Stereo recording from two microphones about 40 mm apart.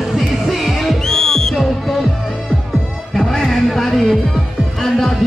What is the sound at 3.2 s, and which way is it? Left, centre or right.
Music, centre.